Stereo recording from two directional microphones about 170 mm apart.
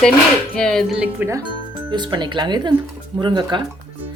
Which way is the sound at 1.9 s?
25° right (ahead or behind).